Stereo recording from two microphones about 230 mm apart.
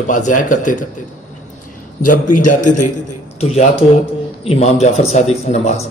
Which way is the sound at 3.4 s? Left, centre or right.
Left.